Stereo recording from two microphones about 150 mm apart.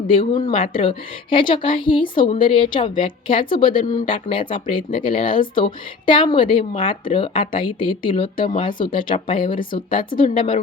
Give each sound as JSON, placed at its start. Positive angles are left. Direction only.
{"t": 0.2, "sound": "a woman's voice", "side_deg": 30}